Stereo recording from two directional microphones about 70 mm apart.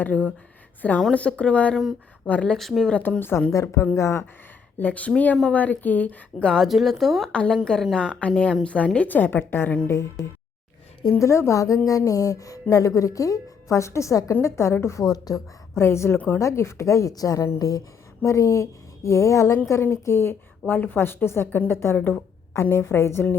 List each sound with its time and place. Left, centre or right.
0.0 s a woman's voice: left
2.6 s speech: centre
2.9 s a woman's voice: centre
3.2 s a woman's voice: left
3.5 s speech: left
4.8 s a woman's voice: left
6.5 s speech: centre
7.3 s a woman's voice: centre; by 9.7 s left
9.8 s a woman's voice: left
15.1 s a woman's voice: left
15.8 s a woman's voice: left
16.4 s speech: left
18.3 s a woman's voice: left